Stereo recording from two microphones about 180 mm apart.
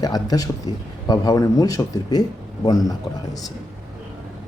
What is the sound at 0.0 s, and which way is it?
A man's voice, 20° left (ahead or behind).